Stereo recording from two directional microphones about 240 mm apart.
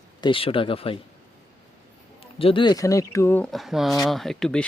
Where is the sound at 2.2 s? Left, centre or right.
Left.